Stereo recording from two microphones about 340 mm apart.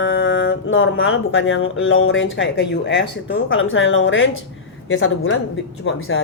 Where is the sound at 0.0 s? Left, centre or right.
Left.